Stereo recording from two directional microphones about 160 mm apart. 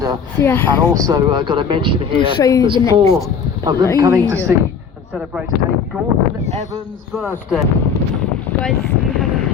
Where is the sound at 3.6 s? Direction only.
25° right (ahead or behind).